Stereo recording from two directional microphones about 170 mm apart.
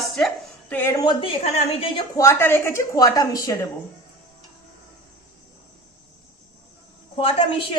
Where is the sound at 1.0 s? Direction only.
30° left (ahead or behind).